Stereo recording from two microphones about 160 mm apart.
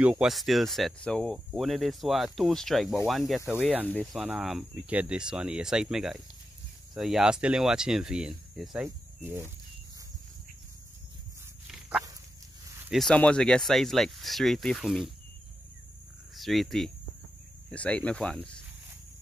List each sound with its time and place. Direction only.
0.0 s speech: 5° right (ahead or behind)
3.8 s speech: 5° left (ahead or behind)
8.8 s speech: 15° right (ahead or behind)
12.9 s speech: 5° left (ahead or behind)
16.3 s speech: centre (ahead or behind)